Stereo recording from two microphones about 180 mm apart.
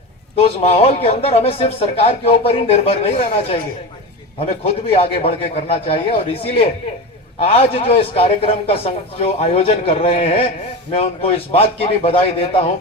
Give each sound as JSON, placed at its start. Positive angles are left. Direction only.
{"t": 0.3, "sound": "speech", "side_deg": 35}